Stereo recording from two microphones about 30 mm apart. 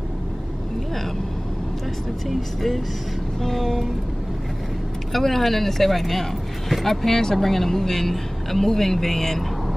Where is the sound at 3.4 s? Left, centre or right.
Centre.